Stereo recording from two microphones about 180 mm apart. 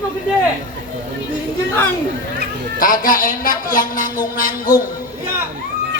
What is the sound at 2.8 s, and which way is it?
Speech, 50° left (ahead or behind).